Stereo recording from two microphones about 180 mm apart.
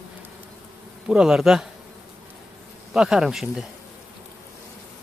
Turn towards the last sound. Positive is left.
turn(degrees=-5)  # may be behind; listen again after turning